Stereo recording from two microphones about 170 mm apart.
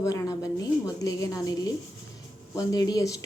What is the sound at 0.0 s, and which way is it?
Speech, 20° left (ahead or behind).